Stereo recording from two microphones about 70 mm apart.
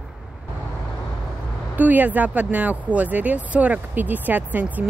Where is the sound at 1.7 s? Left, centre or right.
Right.